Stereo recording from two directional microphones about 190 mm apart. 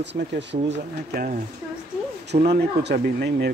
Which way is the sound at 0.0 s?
65° right (ahead or behind).